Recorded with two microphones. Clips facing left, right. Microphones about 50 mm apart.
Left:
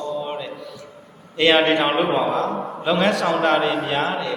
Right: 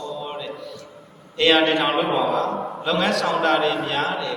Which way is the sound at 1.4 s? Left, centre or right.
Centre.